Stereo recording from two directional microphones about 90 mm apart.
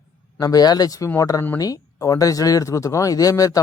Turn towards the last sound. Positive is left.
turn(degrees=40)  # may be behind; listen again after turning